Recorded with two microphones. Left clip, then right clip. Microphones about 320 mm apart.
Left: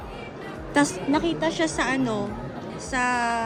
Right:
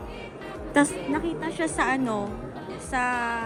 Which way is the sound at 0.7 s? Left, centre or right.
Centre.